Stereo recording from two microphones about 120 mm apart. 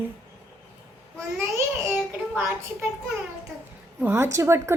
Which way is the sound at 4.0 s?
20° right (ahead or behind).